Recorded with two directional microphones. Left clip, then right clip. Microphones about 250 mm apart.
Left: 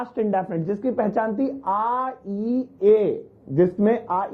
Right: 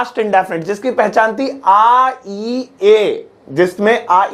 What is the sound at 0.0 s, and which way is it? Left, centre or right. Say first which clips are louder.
Speech: right 10 dB; centre.